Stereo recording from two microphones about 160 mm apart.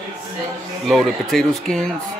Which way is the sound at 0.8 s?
Centre (ahead or behind).